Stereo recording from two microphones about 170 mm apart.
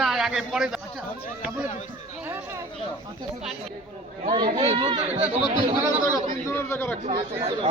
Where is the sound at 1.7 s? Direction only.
40° left (ahead or behind).